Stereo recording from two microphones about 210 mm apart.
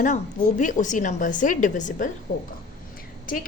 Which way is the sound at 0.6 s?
35° left (ahead or behind).